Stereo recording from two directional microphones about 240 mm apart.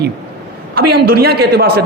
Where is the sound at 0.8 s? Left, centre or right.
Right.